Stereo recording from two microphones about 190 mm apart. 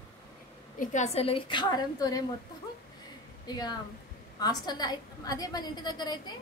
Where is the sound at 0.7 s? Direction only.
35° left (ahead or behind); by 2.2 s 20° left (ahead or behind).